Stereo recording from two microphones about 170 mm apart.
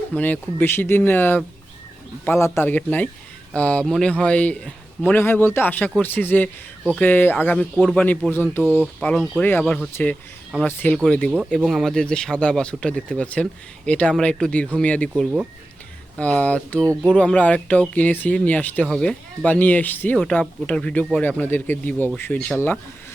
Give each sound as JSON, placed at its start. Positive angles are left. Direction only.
{"t": 0.1, "sound": "speech", "side_deg": 10}
{"t": 8.6, "sound": "speech", "side_deg": -10}
{"t": 9.0, "sound": "speech", "side_deg": 5}
{"t": 16.1, "sound": "speech", "side_deg": 10}
{"t": 16.8, "sound": "speech", "side_deg": -15}
{"t": 17.2, "sound": "speech", "side_deg": 5}